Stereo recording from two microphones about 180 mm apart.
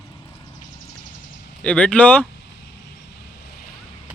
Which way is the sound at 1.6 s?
5° left (ahead or behind).